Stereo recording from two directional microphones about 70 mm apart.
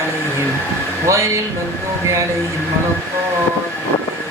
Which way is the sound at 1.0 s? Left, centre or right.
Right.